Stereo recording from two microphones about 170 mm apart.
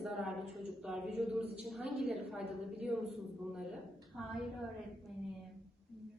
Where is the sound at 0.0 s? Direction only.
Centre (ahead or behind).